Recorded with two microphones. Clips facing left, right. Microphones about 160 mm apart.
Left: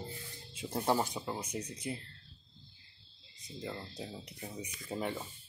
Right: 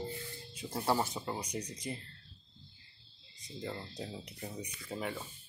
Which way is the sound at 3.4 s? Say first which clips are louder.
Right 1 dB; centre (ahead or behind).